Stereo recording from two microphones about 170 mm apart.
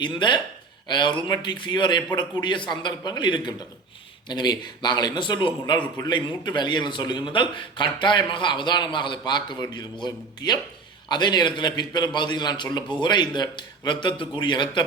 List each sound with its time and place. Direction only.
0.0 s a man's voice: 25° left (ahead or behind)